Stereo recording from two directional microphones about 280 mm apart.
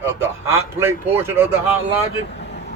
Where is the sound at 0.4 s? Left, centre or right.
Centre.